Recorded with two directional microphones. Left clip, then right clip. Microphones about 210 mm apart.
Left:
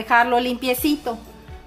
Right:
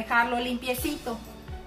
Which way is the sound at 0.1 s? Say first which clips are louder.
Left 8 dB; 45° left (ahead or behind).